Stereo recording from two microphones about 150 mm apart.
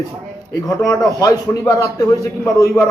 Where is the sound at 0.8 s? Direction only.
20° left (ahead or behind).